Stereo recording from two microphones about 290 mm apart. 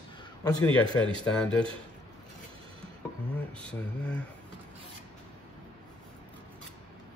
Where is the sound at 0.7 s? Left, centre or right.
Centre.